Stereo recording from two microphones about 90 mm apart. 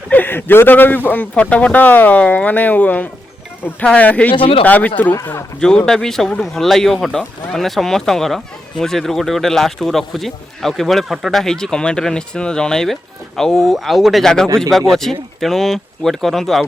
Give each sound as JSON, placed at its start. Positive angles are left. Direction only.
{"t": 0.1, "sound": "speech", "side_deg": 20}
{"t": 4.4, "sound": "speech", "side_deg": 90}
{"t": 4.6, "sound": "speech", "side_deg": 20}
{"t": 5.5, "sound": "speech", "side_deg": 10}
{"t": 14.4, "sound": "speech", "side_deg": -30}
{"t": 14.7, "sound": "speech", "side_deg": 5}